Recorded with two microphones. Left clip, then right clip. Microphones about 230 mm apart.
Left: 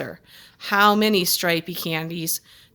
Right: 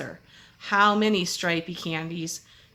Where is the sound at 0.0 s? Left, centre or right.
Left.